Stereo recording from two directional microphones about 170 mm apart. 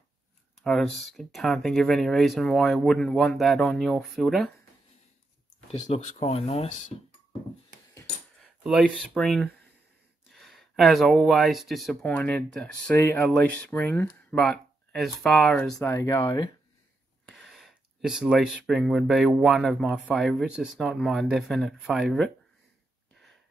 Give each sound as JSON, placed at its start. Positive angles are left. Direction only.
{"t": 0.7, "sound": "speech", "side_deg": 5}
{"t": 5.7, "sound": "speech", "side_deg": 40}
{"t": 8.4, "sound": "speech", "side_deg": 0}
{"t": 12.9, "sound": "speech", "side_deg": 15}
{"t": 13.3, "sound": "speech", "side_deg": 0}
{"t": 17.3, "sound": "speech", "side_deg": 0}